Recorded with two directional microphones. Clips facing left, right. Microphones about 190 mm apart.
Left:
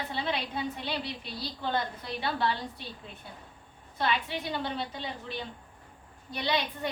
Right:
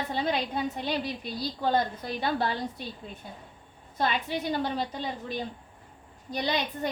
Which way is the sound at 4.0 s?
45° right (ahead or behind).